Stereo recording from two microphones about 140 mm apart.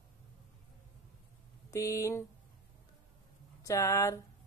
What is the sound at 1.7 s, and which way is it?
Speech, 20° left (ahead or behind).